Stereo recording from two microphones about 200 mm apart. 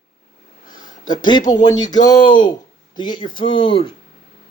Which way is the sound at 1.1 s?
20° left (ahead or behind).